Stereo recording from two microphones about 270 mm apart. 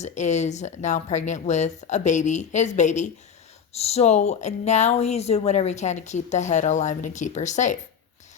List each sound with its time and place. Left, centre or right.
0.0 s speech: left